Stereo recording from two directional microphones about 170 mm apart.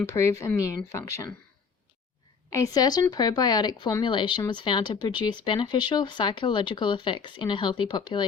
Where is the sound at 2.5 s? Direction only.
20° left (ahead or behind).